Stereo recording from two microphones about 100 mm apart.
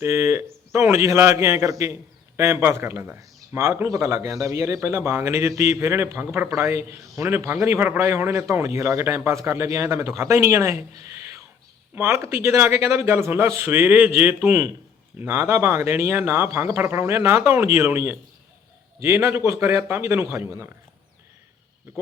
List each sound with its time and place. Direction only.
0.0 s a man's voice: 25° right (ahead or behind)